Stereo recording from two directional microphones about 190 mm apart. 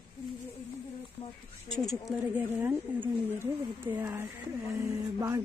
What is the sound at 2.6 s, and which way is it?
Speech, 10° right (ahead or behind).